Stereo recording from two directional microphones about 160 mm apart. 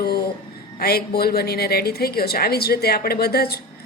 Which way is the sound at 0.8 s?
75° left (ahead or behind).